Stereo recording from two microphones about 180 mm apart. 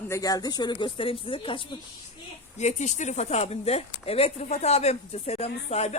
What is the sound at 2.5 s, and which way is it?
Speech, 40° left (ahead or behind).